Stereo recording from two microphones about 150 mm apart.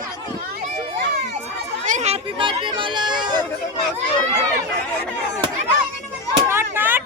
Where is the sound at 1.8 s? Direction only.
50° right (ahead or behind).